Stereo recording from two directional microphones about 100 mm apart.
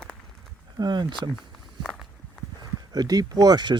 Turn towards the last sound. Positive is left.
turn(degrees=-45)  # may be behind; listen again after turning